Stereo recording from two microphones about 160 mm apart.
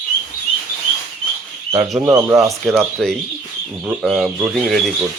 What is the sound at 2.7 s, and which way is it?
Speech, 5° left (ahead or behind).